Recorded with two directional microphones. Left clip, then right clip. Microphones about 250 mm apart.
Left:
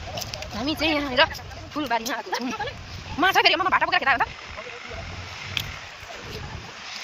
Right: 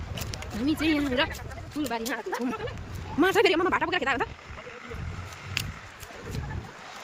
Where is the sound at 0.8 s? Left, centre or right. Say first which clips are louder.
Left 7 dB; centre.